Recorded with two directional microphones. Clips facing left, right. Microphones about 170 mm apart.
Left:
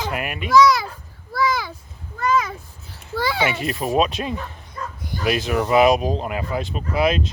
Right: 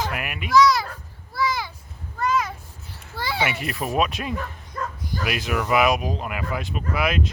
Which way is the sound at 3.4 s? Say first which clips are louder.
Left 4 dB; 25° left (ahead or behind).